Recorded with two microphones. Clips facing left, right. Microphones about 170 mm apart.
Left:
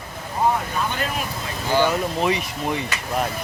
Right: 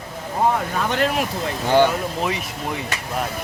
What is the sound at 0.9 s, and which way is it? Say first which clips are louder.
Speech: right 6 dB; 80° right.